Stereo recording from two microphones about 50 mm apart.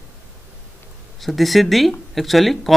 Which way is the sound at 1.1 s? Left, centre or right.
Centre.